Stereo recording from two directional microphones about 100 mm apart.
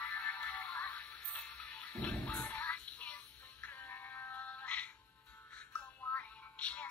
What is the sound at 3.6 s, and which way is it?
Music, 25° left (ahead or behind).